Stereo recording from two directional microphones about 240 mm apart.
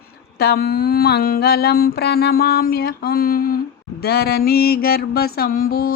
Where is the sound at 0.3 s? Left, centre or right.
Left.